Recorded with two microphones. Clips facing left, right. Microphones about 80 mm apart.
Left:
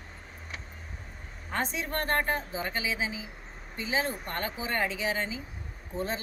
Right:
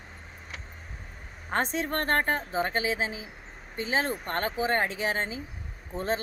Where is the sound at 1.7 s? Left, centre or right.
Right.